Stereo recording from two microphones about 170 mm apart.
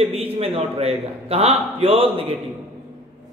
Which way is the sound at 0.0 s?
35° right (ahead or behind).